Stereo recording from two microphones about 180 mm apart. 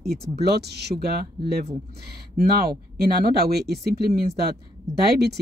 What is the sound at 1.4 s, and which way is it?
Speech, 25° right (ahead or behind).